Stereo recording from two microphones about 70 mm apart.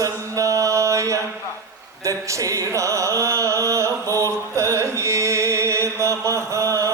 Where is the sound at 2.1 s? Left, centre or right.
Right.